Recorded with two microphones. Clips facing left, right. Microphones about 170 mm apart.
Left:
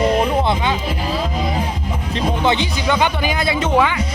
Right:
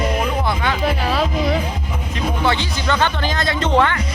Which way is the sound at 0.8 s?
70° right (ahead or behind).